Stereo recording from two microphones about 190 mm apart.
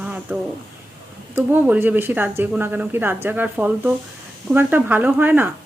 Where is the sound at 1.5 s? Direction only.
10° right (ahead or behind).